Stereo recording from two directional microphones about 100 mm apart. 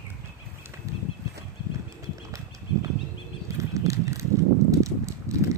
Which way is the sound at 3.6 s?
35° right (ahead or behind).